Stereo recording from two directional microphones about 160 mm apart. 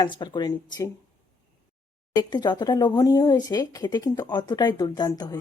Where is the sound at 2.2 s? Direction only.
25° left (ahead or behind).